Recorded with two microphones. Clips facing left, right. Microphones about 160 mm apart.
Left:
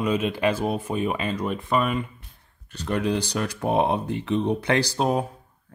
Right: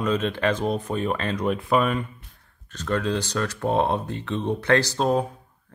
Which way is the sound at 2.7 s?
15° left (ahead or behind).